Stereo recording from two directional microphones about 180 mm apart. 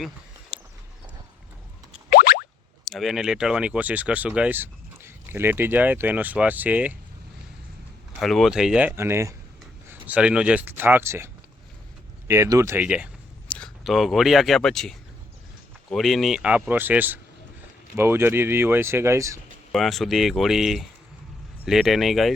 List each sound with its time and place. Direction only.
0.5 s clip-clop: 5° right (ahead or behind)
2.0 s boing: 60° left (ahead or behind)
2.9 s speech: centre (ahead or behind)
8.2 s speech: centre (ahead or behind); by 11.3 s 15° right (ahead or behind)
12.3 s speech: 15° right (ahead or behind)
19.7 s speech: centre (ahead or behind)